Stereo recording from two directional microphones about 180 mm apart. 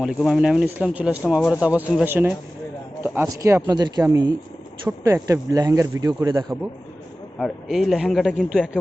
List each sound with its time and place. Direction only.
0.0 s speech: centre (ahead or behind); by 6.4 s 20° right (ahead or behind)
7.3 s speech: centre (ahead or behind)